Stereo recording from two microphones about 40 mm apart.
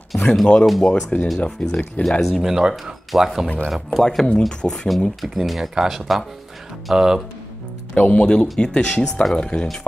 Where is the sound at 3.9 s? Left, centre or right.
Centre.